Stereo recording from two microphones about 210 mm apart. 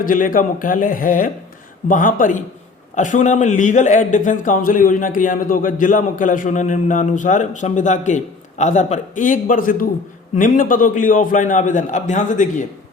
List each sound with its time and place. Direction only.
0.0 s speech: 40° left (ahead or behind)